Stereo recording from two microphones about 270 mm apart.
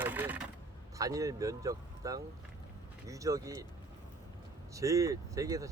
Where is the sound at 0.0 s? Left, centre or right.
Centre.